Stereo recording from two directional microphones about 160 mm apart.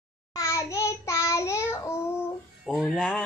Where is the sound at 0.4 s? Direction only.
20° left (ahead or behind).